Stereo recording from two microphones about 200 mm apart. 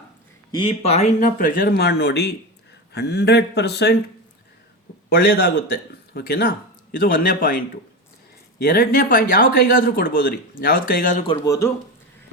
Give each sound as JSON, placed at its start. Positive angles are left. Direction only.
{"t": 0.5, "sound": "speech", "side_deg": 25}
{"t": 5.0, "sound": "speech", "side_deg": 50}
{"t": 11.3, "sound": "speech", "side_deg": 15}